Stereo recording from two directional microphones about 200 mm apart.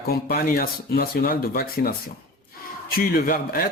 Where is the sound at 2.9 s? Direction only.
50° left (ahead or behind).